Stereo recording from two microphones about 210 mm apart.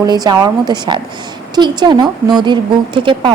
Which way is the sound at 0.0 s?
20° right (ahead or behind).